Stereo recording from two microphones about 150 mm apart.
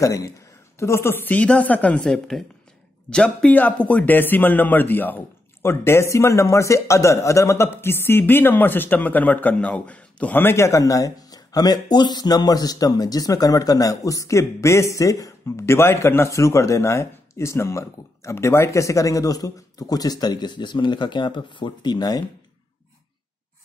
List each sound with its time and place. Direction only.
0.0 s a man's voice: 20° left (ahead or behind)